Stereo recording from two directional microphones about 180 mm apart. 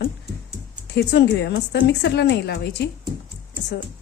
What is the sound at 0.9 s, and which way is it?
A woman's voice, 70° left (ahead or behind).